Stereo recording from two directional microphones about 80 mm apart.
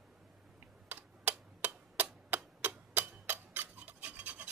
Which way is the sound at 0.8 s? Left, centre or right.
Right.